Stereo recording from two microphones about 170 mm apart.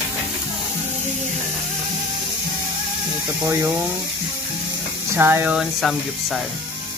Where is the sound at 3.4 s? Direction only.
15° right (ahead or behind).